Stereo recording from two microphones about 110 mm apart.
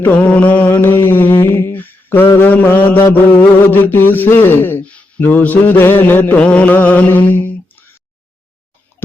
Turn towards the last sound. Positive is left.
turn(degrees=20)  # may be behind; listen again after turning